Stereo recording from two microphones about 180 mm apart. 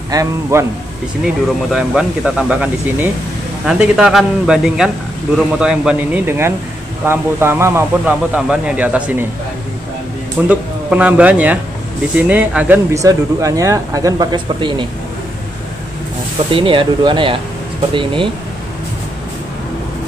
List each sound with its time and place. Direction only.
0.1 s speech: 15° right (ahead or behind)
1.2 s speech: 5° right (ahead or behind)
10.5 s speech: 5° right (ahead or behind); by 14.9 s 25° right (ahead or behind)
16.5 s speech: 30° right (ahead or behind)